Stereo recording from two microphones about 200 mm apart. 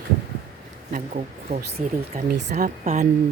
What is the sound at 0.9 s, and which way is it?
A woman's voice, 40° right (ahead or behind).